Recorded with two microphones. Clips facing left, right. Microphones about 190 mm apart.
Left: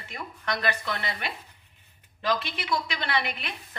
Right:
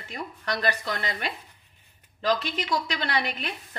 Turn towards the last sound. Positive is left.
turn(degrees=-40)  # may be behind; listen again after turning